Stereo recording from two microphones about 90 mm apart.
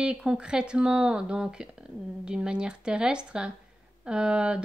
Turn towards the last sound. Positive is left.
turn(degrees=-10)  # may be behind; listen again after turning